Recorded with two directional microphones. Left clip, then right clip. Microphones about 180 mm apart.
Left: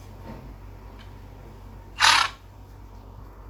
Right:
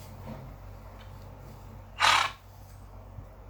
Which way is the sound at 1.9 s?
20° left (ahead or behind).